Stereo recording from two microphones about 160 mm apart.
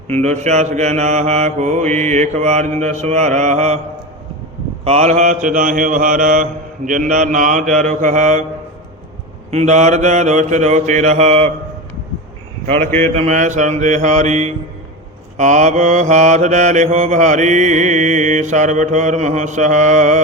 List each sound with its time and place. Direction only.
0.2 s mantra: 45° right (ahead or behind)
4.9 s mantra: 45° right (ahead or behind)
9.5 s mantra: 45° right (ahead or behind)
12.8 s speech: 15° left (ahead or behind)
13.1 s mantra: 50° right (ahead or behind)